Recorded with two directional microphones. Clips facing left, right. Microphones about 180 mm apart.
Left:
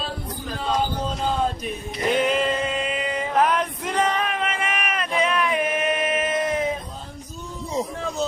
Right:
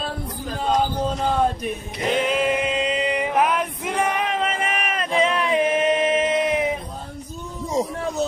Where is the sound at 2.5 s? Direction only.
15° right (ahead or behind).